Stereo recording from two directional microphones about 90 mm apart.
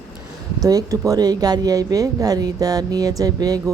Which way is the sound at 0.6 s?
40° right (ahead or behind).